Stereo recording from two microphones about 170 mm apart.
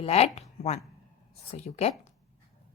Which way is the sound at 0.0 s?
40° left (ahead or behind).